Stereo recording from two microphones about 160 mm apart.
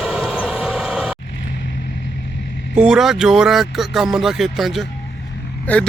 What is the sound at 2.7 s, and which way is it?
Speech, 5° right (ahead or behind).